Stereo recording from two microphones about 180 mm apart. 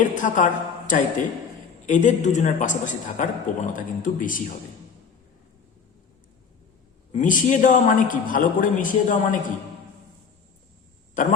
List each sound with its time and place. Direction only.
0.0 s a woman's voice: 45° left (ahead or behind)
7.1 s a woman's voice: 45° left (ahead or behind)
11.1 s speech: 45° left (ahead or behind)